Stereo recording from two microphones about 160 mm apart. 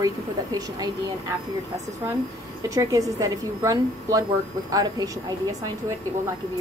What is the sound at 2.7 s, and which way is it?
A woman's voice, 20° right (ahead or behind).